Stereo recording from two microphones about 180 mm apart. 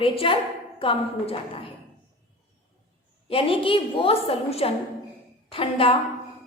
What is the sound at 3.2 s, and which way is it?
A woman's voice, 30° left (ahead or behind).